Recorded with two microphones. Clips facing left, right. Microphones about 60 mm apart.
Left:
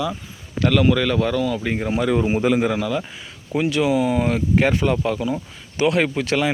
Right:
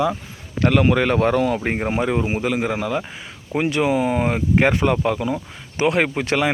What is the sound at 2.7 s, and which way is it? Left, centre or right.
Speech, right.